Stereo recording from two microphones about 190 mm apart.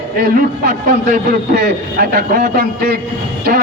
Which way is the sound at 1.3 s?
55° right (ahead or behind).